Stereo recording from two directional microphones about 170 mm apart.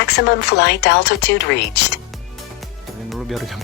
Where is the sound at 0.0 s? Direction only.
85° left.